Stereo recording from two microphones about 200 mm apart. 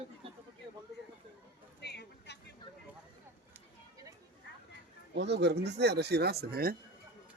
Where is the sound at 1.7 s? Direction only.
55° left (ahead or behind).